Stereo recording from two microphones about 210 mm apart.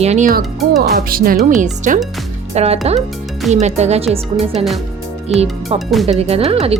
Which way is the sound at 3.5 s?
30° right (ahead or behind).